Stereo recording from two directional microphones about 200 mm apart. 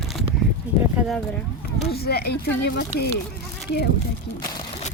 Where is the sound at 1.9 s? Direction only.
50° left (ahead or behind).